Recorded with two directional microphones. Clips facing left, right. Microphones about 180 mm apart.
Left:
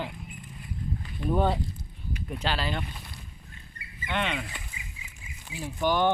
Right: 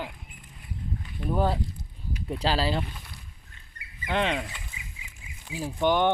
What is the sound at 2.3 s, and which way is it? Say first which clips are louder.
Speech: right 4 dB; 35° right (ahead or behind).